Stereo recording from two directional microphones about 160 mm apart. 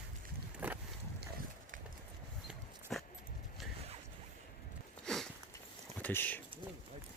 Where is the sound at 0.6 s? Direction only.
10° right (ahead or behind).